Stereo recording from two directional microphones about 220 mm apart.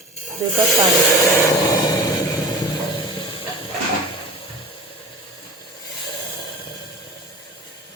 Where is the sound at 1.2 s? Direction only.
15° left (ahead or behind).